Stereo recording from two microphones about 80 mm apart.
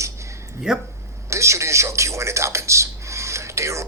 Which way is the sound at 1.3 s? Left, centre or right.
Right.